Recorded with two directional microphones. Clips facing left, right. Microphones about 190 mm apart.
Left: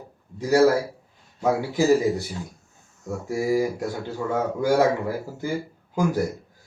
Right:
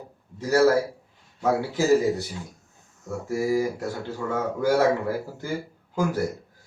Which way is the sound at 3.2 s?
15° left (ahead or behind).